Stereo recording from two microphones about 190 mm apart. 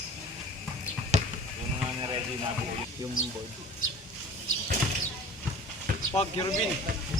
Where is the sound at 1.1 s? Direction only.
35° right (ahead or behind).